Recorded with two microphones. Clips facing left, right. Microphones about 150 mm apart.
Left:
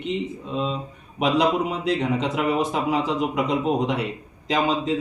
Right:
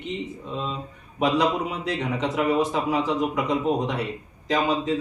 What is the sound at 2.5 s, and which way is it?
A man's voice, 20° left (ahead or behind).